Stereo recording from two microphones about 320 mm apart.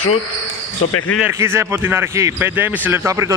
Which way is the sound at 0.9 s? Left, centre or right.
Left.